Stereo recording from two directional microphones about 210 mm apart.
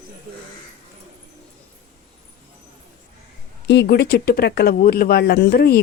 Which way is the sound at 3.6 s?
55° left (ahead or behind).